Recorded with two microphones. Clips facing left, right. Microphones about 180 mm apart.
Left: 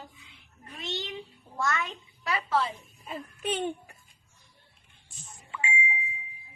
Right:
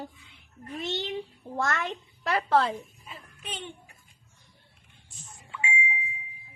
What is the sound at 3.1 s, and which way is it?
Speech, 50° left (ahead or behind).